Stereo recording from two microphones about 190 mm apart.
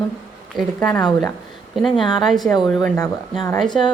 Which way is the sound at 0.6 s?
5° left (ahead or behind).